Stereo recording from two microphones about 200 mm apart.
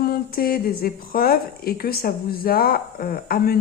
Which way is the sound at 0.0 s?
50° left (ahead or behind).